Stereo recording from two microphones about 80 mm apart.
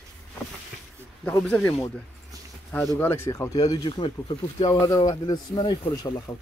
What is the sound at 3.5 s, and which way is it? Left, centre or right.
Speech, left.